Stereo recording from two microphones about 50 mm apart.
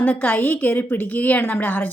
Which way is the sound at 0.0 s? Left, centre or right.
Left.